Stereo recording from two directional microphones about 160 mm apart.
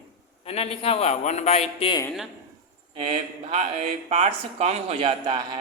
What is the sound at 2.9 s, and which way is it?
A man's voice, 35° right (ahead or behind).